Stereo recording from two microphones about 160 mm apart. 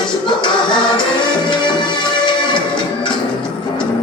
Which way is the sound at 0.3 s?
30° left (ahead or behind).